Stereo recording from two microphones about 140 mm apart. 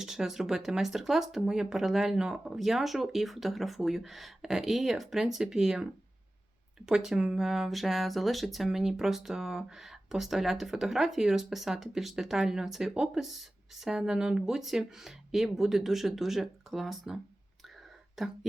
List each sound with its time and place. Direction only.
0.0 s speech: 5° right (ahead or behind)
18.2 s speech: centre (ahead or behind)